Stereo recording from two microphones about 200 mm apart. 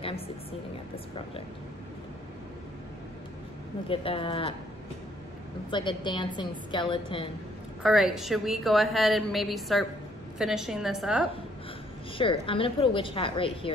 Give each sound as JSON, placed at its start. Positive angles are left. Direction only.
{"t": 0.9, "sound": "a woman's voice", "side_deg": 30}
{"t": 3.9, "sound": "a woman's voice", "side_deg": 25}
{"t": 5.7, "sound": "a woman's voice", "side_deg": 25}
{"t": 7.8, "sound": "a woman's voice", "side_deg": 0}
{"t": 12.2, "sound": "a woman's voice", "side_deg": 25}